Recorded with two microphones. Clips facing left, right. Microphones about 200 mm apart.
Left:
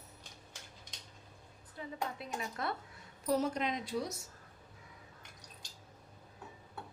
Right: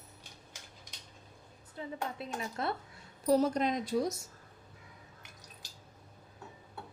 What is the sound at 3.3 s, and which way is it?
Speech, 40° right (ahead or behind).